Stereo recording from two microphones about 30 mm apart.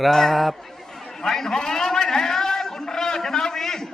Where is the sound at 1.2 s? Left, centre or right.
Centre.